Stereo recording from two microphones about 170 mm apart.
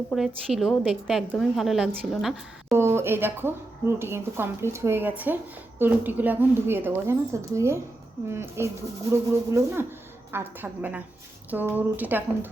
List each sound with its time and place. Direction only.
0.1 s a woman's voice: centre (ahead or behind)
2.7 s speech: 15° right (ahead or behind)